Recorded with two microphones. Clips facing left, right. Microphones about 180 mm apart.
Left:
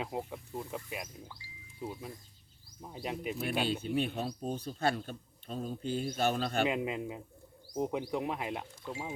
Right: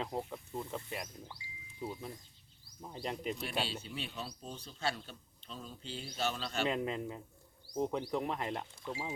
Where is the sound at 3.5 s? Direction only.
55° left (ahead or behind).